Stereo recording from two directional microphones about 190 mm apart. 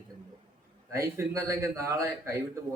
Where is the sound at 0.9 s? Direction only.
15° right (ahead or behind).